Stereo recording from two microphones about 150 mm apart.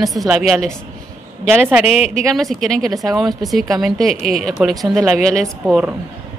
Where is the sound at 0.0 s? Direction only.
Centre (ahead or behind).